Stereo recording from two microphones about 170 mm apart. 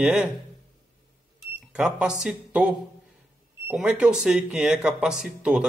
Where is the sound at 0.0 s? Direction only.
5° right (ahead or behind).